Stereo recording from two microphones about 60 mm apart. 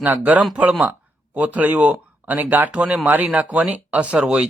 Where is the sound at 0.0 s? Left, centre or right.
Right.